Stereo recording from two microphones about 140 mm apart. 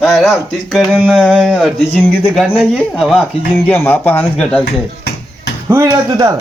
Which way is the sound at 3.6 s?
15° left (ahead or behind).